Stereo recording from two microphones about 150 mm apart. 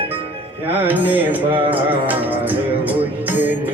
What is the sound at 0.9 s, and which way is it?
Music, 10° right (ahead or behind).